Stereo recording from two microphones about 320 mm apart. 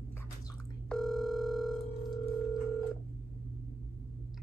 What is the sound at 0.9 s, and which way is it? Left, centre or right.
Telephone, centre.